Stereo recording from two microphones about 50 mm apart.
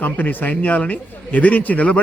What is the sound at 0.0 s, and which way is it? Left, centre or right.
A man's voice, left.